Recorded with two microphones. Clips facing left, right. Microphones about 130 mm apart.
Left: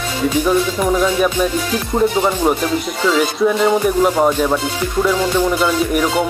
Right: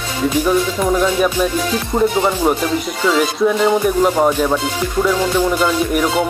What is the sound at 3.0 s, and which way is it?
Speech, centre (ahead or behind).